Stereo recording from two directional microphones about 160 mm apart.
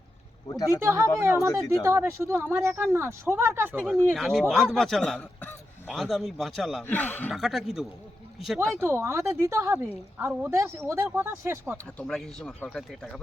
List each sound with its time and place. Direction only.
0.4 s speech: 20° left (ahead or behind)
0.8 s speech: 15° right (ahead or behind)
4.1 s speech: centre (ahead or behind)
6.8 s speech: 10° left (ahead or behind)
7.3 s speech: centre (ahead or behind)
8.7 s speech: 15° right (ahead or behind)
11.9 s speech: 5° left (ahead or behind)